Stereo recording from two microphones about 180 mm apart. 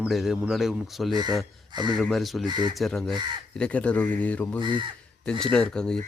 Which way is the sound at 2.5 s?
25° right (ahead or behind).